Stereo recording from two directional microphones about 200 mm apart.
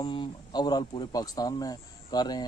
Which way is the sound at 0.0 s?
25° left (ahead or behind).